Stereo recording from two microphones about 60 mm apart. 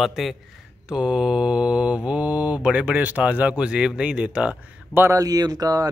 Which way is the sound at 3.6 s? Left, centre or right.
Centre.